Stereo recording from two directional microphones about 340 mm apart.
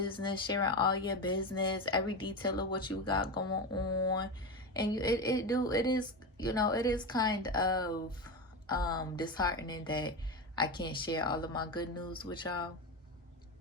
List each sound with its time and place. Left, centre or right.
0.0 s speech: centre
3.8 s a sound: left
4.7 s speech: centre